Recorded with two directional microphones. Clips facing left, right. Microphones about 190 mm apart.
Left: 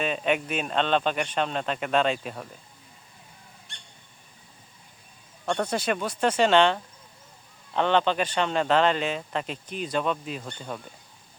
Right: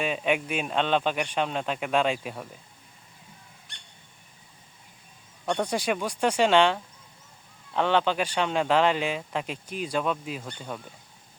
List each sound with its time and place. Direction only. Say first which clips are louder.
0.0 s speech: even; 10° right (ahead or behind)
5.5 s speech: even; 10° right (ahead or behind)